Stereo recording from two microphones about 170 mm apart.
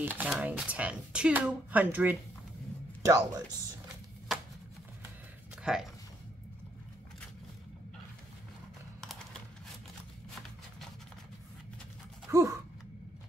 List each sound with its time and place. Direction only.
0.0 s speech: 10° right (ahead or behind)
5.6 s speech: 5° right (ahead or behind)
12.3 s gasp: 20° right (ahead or behind)